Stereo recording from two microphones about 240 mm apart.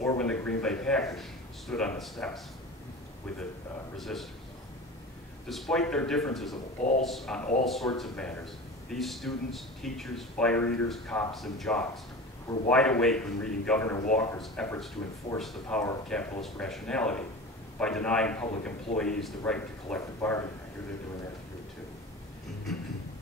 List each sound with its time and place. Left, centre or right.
0.0 s speech: centre
4.0 s speech: centre
5.5 s speech: centre
22.7 s train: centre